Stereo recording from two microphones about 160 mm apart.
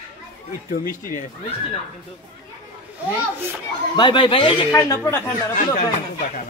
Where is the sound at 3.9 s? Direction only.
30° left (ahead or behind).